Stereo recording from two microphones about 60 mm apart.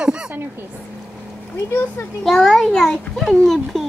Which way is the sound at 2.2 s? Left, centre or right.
Centre.